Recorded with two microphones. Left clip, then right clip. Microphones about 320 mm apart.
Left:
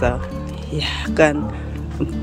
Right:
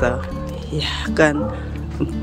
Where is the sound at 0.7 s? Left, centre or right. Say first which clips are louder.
Left 1 dB; centre.